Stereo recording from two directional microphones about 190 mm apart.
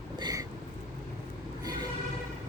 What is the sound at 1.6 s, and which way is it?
Vehicle, 20° right (ahead or behind).